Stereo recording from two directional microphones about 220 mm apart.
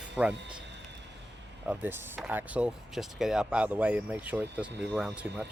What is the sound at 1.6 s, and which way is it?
Speech, 5° right (ahead or behind).